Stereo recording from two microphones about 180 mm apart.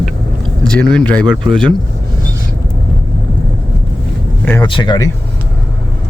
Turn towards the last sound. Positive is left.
turn(degrees=25)  # may be behind; listen again after turning